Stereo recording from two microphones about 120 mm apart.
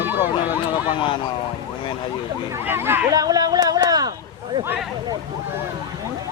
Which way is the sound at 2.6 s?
20° right (ahead or behind).